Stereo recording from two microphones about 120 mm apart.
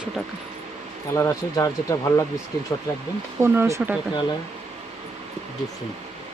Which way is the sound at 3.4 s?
20° right (ahead or behind).